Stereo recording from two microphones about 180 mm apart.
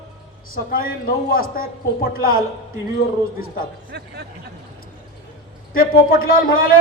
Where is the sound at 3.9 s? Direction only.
70° right (ahead or behind).